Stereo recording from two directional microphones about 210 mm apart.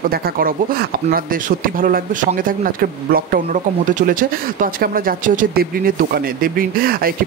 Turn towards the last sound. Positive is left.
turn(degrees=-45)  # may be behind; listen again after turning